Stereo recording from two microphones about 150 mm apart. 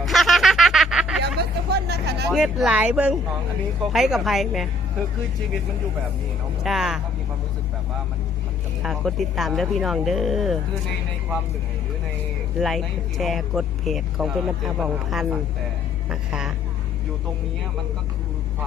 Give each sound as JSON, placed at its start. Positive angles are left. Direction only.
{"t": 0.0, "sound": "a sound", "side_deg": 0}
{"t": 1.2, "sound": "hubbub", "side_deg": -90}
{"t": 2.3, "sound": "speech", "side_deg": -5}
{"t": 6.6, "sound": "speech", "side_deg": 0}
{"t": 8.8, "sound": "speech", "side_deg": 0}
{"t": 12.5, "sound": "speech", "side_deg": 0}